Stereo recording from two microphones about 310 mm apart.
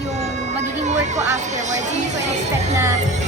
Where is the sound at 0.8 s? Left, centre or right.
Right.